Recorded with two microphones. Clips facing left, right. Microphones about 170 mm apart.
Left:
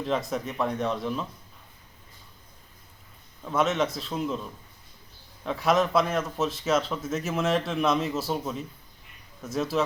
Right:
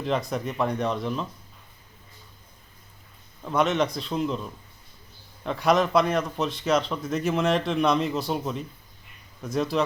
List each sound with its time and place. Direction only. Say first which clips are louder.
0.0 s a man's voice: right 1 dB; centre (ahead or behind)
3.4 s a man's voice: right 2 dB; centre (ahead or behind)
5.4 s a man's voice: right 2 dB; centre (ahead or behind)